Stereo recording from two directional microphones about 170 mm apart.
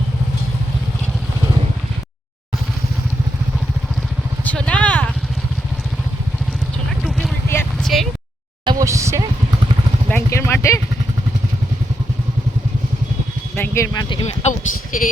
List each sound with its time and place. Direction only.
4.4 s vehicle: 10° left (ahead or behind)
7.4 s vehicle: 15° left (ahead or behind)
7.9 s a sound: centre (ahead or behind)
8.6 s music: 20° right (ahead or behind)
10.1 s vehicle: 15° left (ahead or behind)
13.6 s speech: 15° left (ahead or behind); by 14.5 s 35° left (ahead or behind)
14.9 s speech: 55° left (ahead or behind)